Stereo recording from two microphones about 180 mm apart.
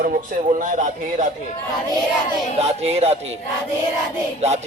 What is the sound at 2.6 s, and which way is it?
Speech, 35° right (ahead or behind).